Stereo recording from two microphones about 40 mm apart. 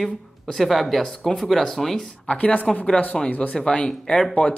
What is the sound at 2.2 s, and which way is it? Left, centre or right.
Speech, left.